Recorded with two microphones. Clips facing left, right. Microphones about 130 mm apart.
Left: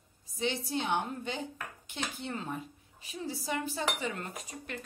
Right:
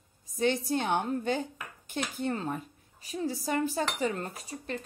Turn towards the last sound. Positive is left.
turn(degrees=-35)  # may be behind; listen again after turning